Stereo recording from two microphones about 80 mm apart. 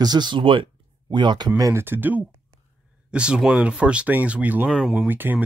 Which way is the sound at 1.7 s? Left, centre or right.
Right.